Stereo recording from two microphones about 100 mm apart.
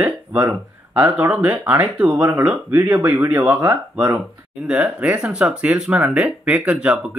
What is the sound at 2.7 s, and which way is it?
Speech, 30° right (ahead or behind).